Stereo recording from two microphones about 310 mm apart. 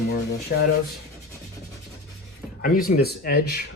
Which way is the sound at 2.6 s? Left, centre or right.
Left.